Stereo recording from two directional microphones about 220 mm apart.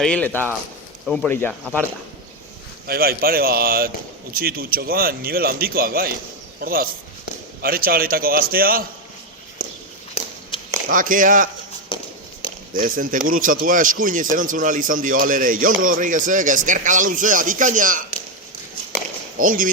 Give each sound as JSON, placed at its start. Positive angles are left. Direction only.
{"t": 0.0, "sound": "speech", "side_deg": 5}
{"t": 2.8, "sound": "speech", "side_deg": -45}
{"t": 9.6, "sound": "walk", "side_deg": 35}
{"t": 10.5, "sound": "a sound", "side_deg": 20}
{"t": 10.8, "sound": "speech", "side_deg": -40}
{"t": 12.7, "sound": "speech", "side_deg": -40}
{"t": 19.4, "sound": "speech", "side_deg": -40}